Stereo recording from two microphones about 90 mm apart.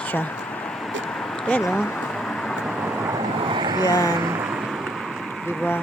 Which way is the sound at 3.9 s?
40° left (ahead or behind).